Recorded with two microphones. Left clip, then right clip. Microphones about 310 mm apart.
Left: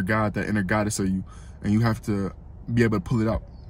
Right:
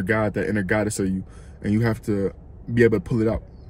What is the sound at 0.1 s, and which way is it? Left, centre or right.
Speech, left.